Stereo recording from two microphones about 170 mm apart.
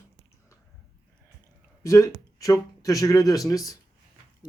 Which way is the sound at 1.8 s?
20° left (ahead or behind).